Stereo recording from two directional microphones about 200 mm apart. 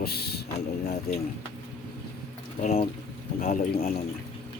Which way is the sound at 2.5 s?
30° left (ahead or behind).